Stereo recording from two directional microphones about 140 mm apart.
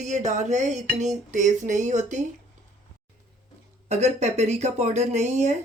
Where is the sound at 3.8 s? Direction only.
55° right (ahead or behind).